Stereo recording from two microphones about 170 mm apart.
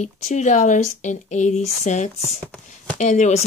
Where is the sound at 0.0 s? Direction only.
45° left (ahead or behind).